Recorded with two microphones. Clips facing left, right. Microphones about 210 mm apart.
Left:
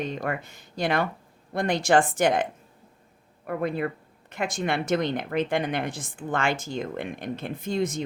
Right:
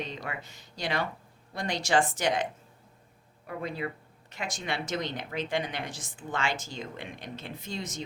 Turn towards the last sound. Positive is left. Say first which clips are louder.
# left 10 dB
turn(degrees=55)  # may be behind; listen again after turning